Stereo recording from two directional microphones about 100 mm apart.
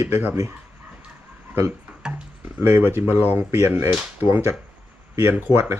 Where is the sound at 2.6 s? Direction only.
20° right (ahead or behind).